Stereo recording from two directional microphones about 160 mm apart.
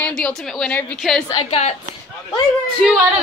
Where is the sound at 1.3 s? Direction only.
40° left (ahead or behind).